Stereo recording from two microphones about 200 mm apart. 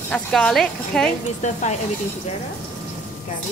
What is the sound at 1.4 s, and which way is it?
Speech, 35° left (ahead or behind).